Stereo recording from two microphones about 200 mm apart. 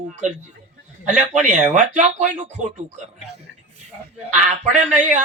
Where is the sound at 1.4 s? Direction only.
40° right (ahead or behind).